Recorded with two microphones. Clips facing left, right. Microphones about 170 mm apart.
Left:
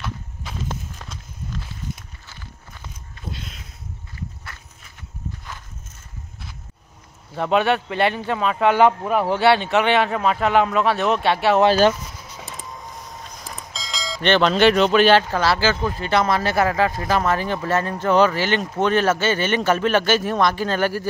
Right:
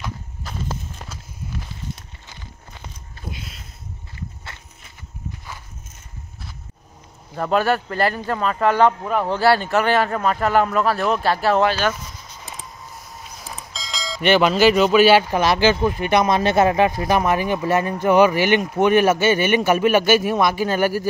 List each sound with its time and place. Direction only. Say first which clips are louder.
0.5 s walk: right 1 dB; centre (ahead or behind)
0.9 s walk: right 1 dB; 10° right (ahead or behind)
4.2 s walk: left 1 dB; 25° right (ahead or behind)
7.3 s speech: even; centre (ahead or behind)
13.6 s speech: left 1 dB; centre (ahead or behind)